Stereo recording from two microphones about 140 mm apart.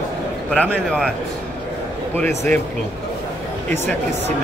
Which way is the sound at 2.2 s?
15° left (ahead or behind).